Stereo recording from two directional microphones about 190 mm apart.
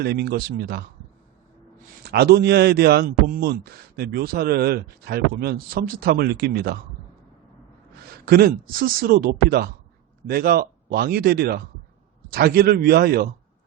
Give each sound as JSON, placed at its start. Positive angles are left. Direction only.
{"t": 0.0, "sound": "a man's voice", "side_deg": -55}
{"t": 2.0, "sound": "a man's voice", "side_deg": -55}
{"t": 8.1, "sound": "speech", "side_deg": -55}